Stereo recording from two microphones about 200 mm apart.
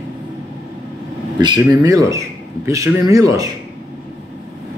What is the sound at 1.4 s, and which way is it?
Speech, 20° right (ahead or behind).